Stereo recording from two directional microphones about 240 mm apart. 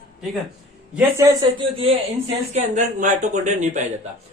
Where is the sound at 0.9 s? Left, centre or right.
Centre; by 3.8 s right.